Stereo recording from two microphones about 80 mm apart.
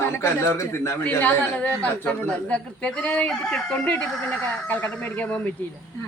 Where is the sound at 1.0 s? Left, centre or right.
Left.